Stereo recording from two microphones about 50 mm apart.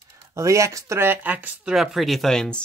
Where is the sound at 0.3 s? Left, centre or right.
Right.